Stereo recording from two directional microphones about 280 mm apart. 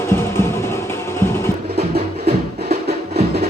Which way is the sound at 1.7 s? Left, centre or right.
Right.